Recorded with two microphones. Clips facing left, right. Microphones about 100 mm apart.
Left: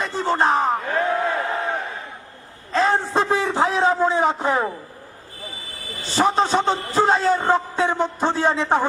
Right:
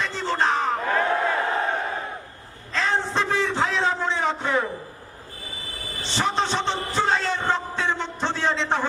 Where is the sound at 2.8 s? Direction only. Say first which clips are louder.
Left 5 dB; 40° left (ahead or behind).